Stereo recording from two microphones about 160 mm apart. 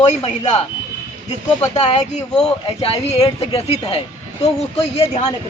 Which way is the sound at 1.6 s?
40° left (ahead or behind).